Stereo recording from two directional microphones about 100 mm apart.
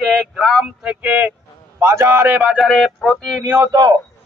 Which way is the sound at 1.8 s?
25° right (ahead or behind).